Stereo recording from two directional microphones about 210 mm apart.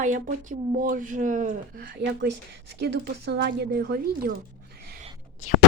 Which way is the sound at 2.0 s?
55° right (ahead or behind).